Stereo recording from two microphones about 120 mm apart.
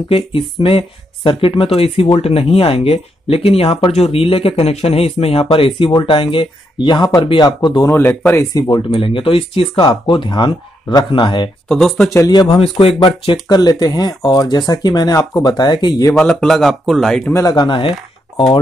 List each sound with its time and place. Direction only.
0.1 s speech: 45° left (ahead or behind)
7.4 s speech: 35° left (ahead or behind)
8.9 s speech: 50° left (ahead or behind)
11.7 s speech: centre (ahead or behind)
12.3 s speech: 40° left (ahead or behind)
16.2 s speech: 5° left (ahead or behind)
17.3 s speech: 30° left (ahead or behind); by 18.4 s 45° left (ahead or behind)